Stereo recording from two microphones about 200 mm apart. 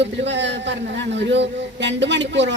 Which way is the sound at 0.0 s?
60° right (ahead or behind).